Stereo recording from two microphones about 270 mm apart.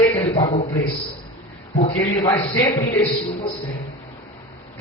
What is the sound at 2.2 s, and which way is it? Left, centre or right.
Speech, centre.